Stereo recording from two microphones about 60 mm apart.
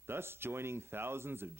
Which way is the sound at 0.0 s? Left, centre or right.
Right.